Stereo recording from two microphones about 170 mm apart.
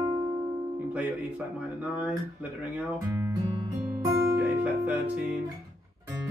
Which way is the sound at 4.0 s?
15° right (ahead or behind).